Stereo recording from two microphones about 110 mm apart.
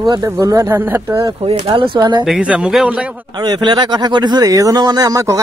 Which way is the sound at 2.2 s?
5° right (ahead or behind).